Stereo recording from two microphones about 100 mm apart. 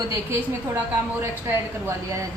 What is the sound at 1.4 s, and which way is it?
Speech, 25° right (ahead or behind).